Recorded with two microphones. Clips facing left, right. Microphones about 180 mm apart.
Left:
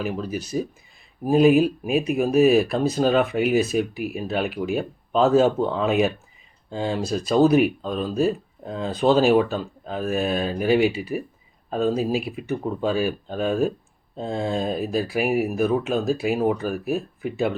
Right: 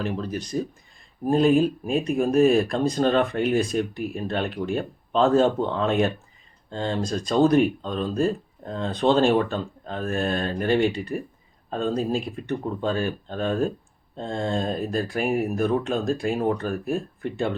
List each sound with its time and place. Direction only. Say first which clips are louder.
0.0 s speech: left 1 dB; 5° left (ahead or behind)